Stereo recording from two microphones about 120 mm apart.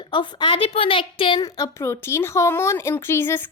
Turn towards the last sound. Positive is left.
turn(degrees=20)  # may be behind; listen again after turning